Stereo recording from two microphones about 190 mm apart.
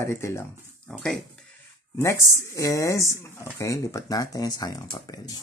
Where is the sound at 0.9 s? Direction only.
Centre (ahead or behind).